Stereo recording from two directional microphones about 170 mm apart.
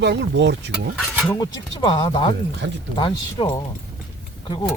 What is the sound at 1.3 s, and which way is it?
Speech, 25° left (ahead or behind).